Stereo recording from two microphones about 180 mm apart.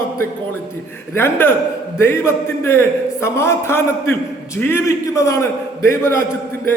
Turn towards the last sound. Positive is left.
turn(degrees=15)  # may be behind; listen again after turning